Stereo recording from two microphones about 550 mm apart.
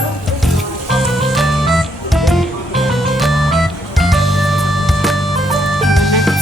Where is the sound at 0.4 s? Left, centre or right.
Centre.